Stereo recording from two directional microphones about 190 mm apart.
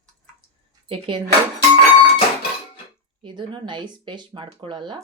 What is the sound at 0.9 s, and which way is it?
Speech, 25° right (ahead or behind).